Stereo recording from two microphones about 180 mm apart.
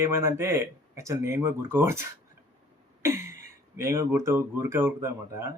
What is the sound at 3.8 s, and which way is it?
Speech, 15° right (ahead or behind).